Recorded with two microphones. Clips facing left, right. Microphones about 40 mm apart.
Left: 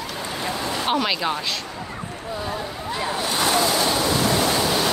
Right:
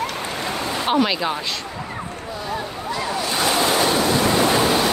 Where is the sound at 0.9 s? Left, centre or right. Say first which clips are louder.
Right 3 dB; centre.